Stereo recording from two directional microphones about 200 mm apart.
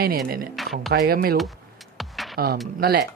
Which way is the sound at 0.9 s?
50° right (ahead or behind).